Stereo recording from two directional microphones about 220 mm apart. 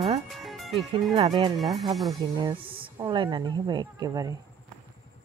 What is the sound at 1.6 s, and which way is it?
Speech, centre (ahead or behind).